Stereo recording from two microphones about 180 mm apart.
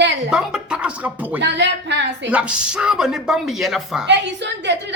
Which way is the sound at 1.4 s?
75° right (ahead or behind).